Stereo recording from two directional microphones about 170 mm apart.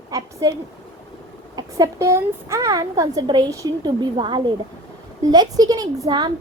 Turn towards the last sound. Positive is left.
turn(degrees=-25)  # may be behind; listen again after turning